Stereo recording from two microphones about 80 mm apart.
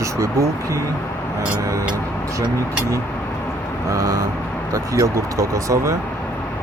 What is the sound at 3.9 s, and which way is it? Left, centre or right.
Speech, right.